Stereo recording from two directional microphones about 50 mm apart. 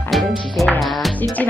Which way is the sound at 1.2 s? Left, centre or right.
Left.